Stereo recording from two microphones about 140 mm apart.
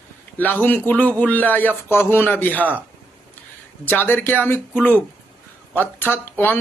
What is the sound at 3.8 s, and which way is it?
Speech, 15° left (ahead or behind).